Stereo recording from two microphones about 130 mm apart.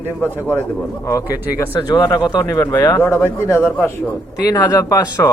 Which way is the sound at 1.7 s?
30° left (ahead or behind).